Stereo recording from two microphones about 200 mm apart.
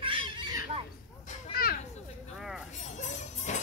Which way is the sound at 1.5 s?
50° left (ahead or behind).